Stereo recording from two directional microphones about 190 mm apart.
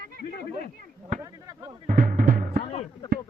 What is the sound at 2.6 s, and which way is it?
Music, 35° left (ahead or behind).